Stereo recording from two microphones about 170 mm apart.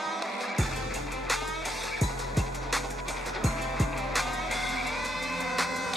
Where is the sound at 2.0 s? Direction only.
Centre (ahead or behind).